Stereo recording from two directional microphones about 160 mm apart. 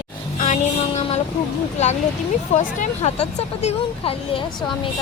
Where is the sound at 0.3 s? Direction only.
50° left (ahead or behind).